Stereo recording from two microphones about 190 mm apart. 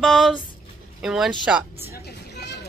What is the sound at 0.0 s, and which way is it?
Speech, centre (ahead or behind).